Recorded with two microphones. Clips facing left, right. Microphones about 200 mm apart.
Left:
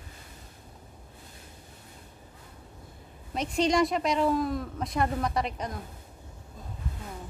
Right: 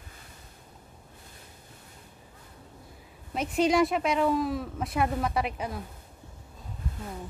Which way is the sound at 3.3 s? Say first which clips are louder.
Right 1 dB; 5° right (ahead or behind).